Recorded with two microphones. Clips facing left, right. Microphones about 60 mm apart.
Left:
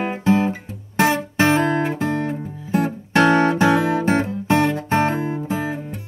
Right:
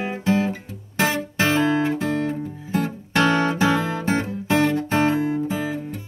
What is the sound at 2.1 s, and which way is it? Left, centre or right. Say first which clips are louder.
Music: even; centre.